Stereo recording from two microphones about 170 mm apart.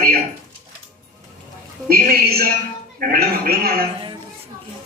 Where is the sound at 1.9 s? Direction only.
60° right (ahead or behind).